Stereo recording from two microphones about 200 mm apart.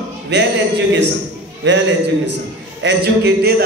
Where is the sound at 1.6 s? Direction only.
65° right (ahead or behind).